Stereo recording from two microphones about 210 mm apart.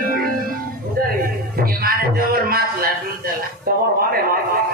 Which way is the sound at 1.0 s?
45° right (ahead or behind).